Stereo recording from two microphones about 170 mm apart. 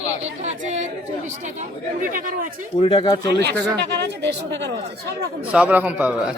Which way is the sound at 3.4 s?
85° right.